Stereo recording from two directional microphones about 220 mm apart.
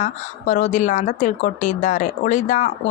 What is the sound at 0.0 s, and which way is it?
A woman's voice, 35° left (ahead or behind).